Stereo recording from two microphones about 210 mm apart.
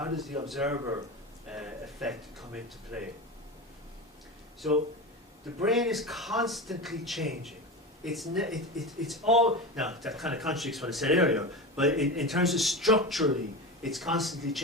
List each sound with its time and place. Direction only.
0.0 s speech: centre (ahead or behind)
0.8 s speech: 15° right (ahead or behind)
1.5 s speech: 5° right (ahead or behind)
5.6 s speech: centre (ahead or behind)